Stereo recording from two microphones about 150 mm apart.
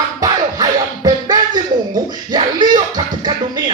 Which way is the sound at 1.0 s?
25° right (ahead or behind).